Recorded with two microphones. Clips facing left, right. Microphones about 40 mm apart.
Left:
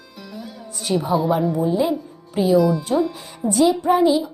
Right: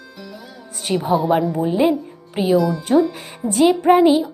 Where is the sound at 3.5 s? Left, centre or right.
Right.